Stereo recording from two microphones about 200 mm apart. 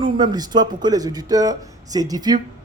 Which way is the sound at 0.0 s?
20° right (ahead or behind).